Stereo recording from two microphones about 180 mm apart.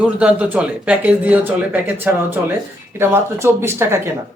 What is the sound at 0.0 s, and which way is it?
A man's voice, 5° right (ahead or behind).